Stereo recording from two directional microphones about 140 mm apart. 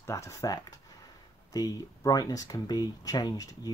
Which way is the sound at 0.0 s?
20° left (ahead or behind).